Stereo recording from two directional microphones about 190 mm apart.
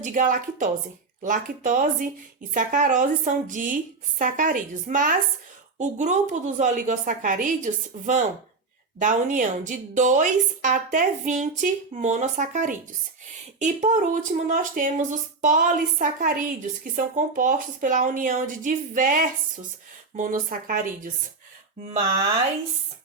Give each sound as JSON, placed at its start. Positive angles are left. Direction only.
{"t": 0.0, "sound": "a woman's voice", "side_deg": -45}